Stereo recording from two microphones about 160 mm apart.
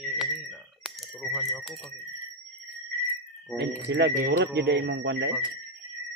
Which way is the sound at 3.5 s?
90° right.